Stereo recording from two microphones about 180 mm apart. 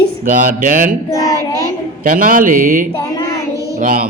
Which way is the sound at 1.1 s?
15° left (ahead or behind).